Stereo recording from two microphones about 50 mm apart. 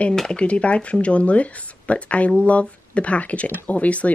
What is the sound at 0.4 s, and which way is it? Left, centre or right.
Speech, left.